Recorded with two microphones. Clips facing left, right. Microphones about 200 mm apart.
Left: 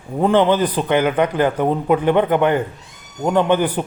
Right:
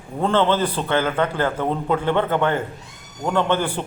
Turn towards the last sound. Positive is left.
turn(degrees=15)  # may be behind; listen again after turning